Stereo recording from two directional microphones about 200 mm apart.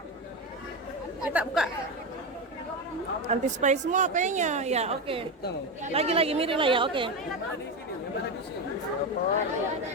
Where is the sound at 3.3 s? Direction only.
35° right (ahead or behind).